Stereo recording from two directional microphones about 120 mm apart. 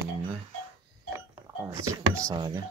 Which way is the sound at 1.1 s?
20° right (ahead or behind).